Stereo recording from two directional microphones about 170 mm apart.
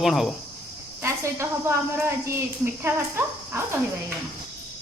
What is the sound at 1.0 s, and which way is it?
Cricket, 15° right (ahead or behind).